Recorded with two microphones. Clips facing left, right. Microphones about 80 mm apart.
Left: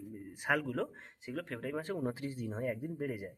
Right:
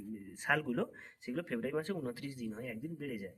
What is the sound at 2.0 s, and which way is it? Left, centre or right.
Speech, left.